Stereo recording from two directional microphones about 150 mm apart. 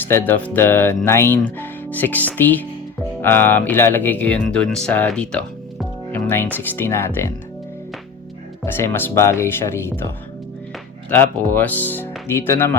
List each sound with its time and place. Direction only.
0.1 s speech: 15° left (ahead or behind)
8.6 s speech: 15° left (ahead or behind)
11.1 s speech: 15° left (ahead or behind)